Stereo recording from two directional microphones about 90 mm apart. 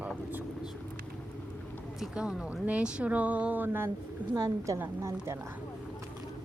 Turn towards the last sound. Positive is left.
turn(degrees=-30)  # may be behind; listen again after turning